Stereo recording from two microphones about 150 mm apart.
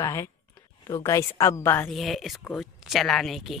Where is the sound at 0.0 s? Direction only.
20° left (ahead or behind).